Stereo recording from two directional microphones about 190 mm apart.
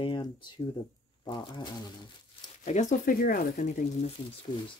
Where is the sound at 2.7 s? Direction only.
40° left (ahead or behind).